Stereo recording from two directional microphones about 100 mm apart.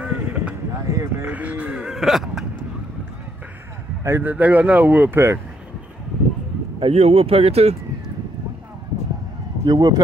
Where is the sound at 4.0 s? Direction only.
25° right (ahead or behind).